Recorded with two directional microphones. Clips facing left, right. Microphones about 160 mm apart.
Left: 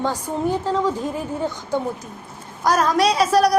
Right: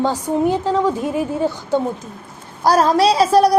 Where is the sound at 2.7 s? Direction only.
30° right (ahead or behind).